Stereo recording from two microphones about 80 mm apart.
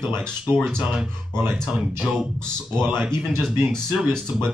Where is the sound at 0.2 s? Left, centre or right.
Right.